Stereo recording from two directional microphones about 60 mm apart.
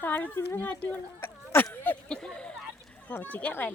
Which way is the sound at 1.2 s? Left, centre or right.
Left.